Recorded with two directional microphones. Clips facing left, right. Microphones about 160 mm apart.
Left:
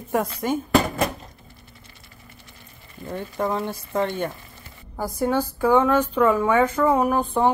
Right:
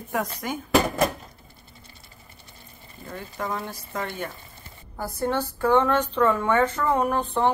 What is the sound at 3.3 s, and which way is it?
Speech, 25° left (ahead or behind).